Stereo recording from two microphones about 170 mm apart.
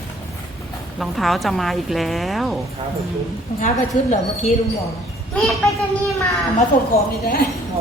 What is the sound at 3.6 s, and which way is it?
Speech, 40° left (ahead or behind).